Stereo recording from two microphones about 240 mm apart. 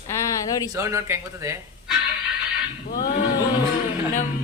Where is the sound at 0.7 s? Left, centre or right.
Centre.